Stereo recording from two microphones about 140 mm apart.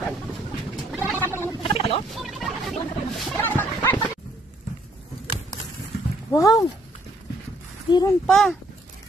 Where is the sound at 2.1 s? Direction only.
Centre (ahead or behind).